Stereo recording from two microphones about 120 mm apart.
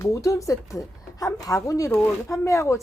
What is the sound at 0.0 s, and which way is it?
Speech, 25° left (ahead or behind).